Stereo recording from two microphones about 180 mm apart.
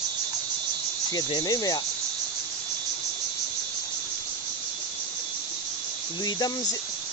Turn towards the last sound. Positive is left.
turn(degrees=20)  # may be behind; listen again after turning